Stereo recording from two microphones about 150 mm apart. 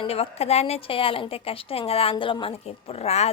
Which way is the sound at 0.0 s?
40° left (ahead or behind).